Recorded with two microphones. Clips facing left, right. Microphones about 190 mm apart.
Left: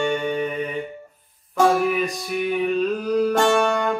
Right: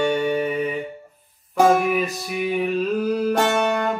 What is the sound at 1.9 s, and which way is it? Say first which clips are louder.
Speech: even; 5° right (ahead or behind).